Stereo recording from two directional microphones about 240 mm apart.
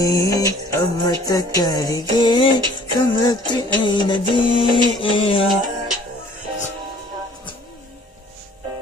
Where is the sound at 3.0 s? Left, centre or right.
Centre.